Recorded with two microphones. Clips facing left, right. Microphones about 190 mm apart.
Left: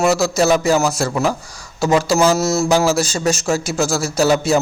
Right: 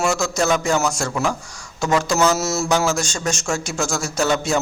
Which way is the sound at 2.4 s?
Centre (ahead or behind).